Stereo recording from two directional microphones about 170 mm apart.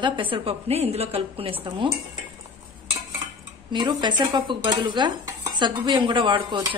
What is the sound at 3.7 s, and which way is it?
Dishes, 25° right (ahead or behind).